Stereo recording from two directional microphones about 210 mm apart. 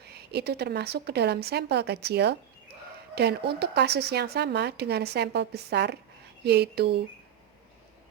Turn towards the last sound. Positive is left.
turn(degrees=-50)  # may be behind; listen again after turning